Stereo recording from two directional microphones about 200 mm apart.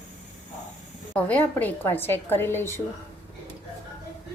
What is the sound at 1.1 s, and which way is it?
A woman's voice, 10° left (ahead or behind).